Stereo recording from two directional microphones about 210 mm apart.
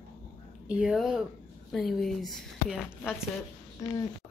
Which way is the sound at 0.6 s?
5° right (ahead or behind).